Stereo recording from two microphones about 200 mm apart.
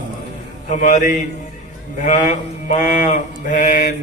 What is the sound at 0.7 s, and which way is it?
Mantra, 40° left (ahead or behind).